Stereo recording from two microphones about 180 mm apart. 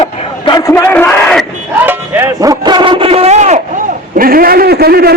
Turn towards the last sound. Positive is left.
turn(degrees=-60)  # may be behind; listen again after turning